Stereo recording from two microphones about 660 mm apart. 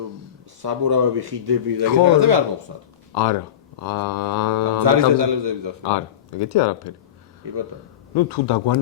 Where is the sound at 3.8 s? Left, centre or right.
Left.